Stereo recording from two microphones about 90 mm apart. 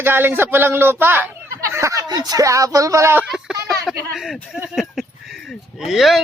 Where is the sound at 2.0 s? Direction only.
50° right (ahead or behind).